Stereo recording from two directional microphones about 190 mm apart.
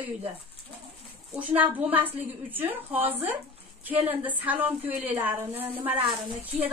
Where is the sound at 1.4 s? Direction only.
10° right (ahead or behind).